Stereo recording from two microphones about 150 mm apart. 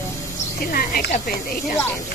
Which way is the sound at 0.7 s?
75° left (ahead or behind).